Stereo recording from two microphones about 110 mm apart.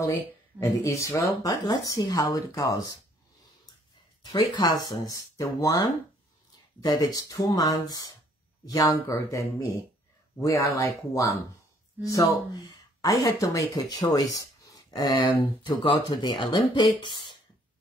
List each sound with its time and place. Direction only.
0.0 s speech: 30° left (ahead or behind)
4.2 s speech: 40° left (ahead or behind)
14.1 s a sound: 30° left (ahead or behind)
15.1 s speech: 45° left (ahead or behind)